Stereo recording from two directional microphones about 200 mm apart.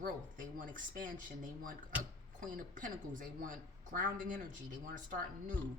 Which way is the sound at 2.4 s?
40° right (ahead or behind).